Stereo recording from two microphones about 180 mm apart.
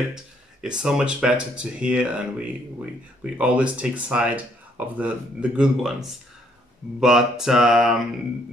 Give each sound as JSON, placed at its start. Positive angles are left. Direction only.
{"t": 0.1, "sound": "speech", "side_deg": -5}